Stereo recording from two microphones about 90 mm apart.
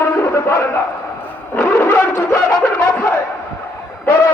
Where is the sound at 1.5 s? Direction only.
25° left (ahead or behind).